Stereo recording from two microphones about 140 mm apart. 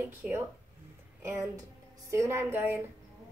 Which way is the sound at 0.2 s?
5° right (ahead or behind).